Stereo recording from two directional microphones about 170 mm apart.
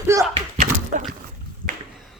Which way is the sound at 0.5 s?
45° right (ahead or behind).